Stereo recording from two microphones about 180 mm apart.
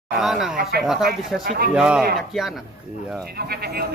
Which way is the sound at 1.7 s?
5° right (ahead or behind).